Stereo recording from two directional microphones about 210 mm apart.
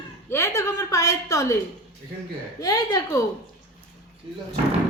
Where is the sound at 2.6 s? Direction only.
15° left (ahead or behind).